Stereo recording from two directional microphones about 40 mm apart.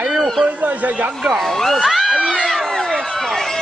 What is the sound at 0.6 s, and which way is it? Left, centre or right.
Speech, right.